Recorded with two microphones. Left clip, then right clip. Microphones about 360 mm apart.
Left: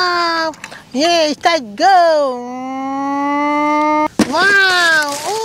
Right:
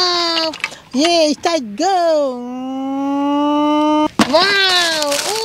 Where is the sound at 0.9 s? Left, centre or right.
Left.